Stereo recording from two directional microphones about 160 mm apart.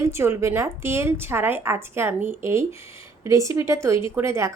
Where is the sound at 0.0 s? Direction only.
15° right (ahead or behind).